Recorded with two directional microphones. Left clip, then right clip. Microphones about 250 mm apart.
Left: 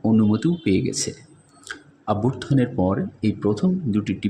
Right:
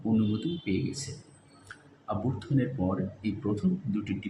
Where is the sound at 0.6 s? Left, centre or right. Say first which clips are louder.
Left 11 dB; left.